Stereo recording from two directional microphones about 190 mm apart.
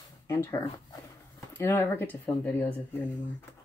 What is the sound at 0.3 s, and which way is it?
Speech, 15° left (ahead or behind).